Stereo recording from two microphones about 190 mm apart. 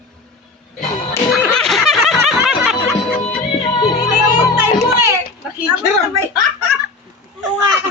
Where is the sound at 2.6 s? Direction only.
Centre (ahead or behind).